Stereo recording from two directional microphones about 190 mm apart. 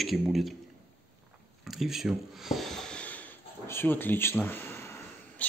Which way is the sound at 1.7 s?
Centre (ahead or behind).